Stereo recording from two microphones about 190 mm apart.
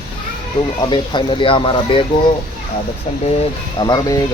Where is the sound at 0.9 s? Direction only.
25° left (ahead or behind).